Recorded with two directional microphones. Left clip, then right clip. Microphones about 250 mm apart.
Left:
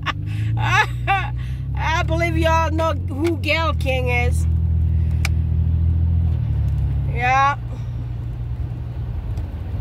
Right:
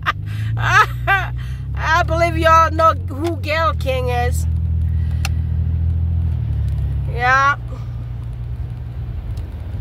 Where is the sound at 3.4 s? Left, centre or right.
Right.